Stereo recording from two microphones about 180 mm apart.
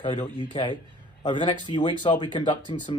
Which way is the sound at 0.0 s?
25° left (ahead or behind).